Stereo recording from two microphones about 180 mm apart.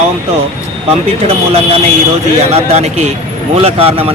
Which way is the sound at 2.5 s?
40° right (ahead or behind).